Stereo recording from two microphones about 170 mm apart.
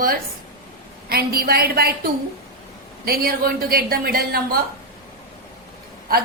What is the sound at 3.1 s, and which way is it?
A woman's voice, 65° right (ahead or behind).